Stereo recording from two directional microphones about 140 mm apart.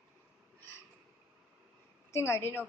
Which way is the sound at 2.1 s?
20° left (ahead or behind).